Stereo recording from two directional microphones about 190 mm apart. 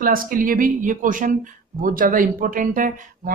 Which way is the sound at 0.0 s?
45° right (ahead or behind).